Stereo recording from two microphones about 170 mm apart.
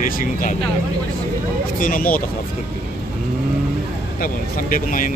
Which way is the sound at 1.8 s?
55° left (ahead or behind).